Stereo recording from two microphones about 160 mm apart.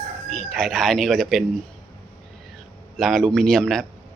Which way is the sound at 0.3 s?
Centre (ahead or behind).